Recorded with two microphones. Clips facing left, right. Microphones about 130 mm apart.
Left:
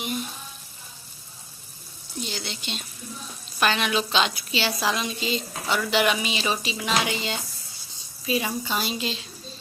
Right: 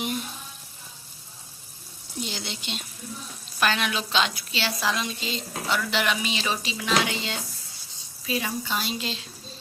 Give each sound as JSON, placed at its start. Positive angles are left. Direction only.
{"t": 2.2, "sound": "speech", "side_deg": -20}
{"t": 3.6, "sound": "a woman's voice", "side_deg": 0}